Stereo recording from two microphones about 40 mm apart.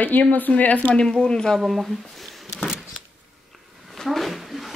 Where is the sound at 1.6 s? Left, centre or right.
Centre.